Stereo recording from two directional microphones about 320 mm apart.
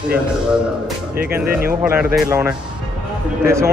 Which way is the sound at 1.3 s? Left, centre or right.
Centre.